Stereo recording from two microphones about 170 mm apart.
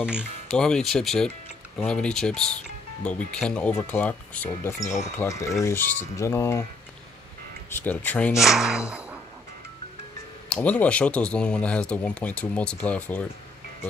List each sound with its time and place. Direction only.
0.0 s speech: centre (ahead or behind); by 6.6 s 15° left (ahead or behind)
7.8 s speech: 10° left (ahead or behind)
8.4 s a sound: 5° right (ahead or behind)
10.5 s speech: 10° left (ahead or behind)